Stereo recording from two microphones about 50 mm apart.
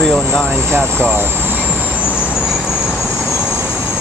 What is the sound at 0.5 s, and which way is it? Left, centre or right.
Speech, right.